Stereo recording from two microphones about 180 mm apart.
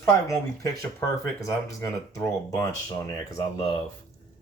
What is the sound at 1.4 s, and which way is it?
Speech, 20° left (ahead or behind).